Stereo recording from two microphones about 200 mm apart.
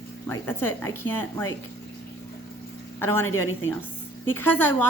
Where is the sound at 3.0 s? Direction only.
10° left (ahead or behind).